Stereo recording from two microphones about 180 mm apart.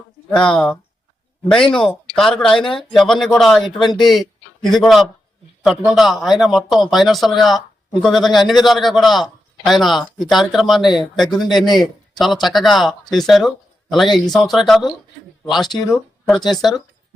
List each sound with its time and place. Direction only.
0.3 s a man's voice: 5° left (ahead or behind)
15.7 s speech: 20° left (ahead or behind)
16.5 s speech: centre (ahead or behind)